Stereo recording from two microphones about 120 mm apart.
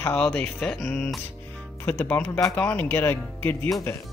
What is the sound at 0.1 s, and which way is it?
Speech, 10° left (ahead or behind).